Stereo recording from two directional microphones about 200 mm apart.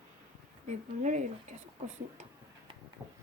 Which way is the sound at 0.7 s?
40° right (ahead or behind).